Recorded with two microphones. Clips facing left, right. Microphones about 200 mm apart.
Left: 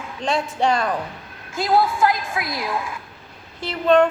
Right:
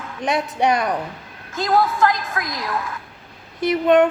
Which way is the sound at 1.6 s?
10° left (ahead or behind).